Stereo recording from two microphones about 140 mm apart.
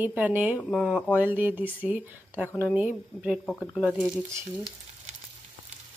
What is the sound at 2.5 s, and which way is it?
Speech, 15° left (ahead or behind).